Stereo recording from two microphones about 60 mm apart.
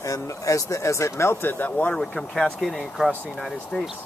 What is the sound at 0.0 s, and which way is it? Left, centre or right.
Speech, left.